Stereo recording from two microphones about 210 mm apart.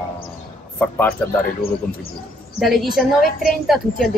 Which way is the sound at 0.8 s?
10° left (ahead or behind).